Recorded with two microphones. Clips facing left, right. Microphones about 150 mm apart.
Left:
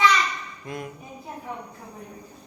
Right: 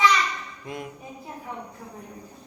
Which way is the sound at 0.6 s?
15° right (ahead or behind).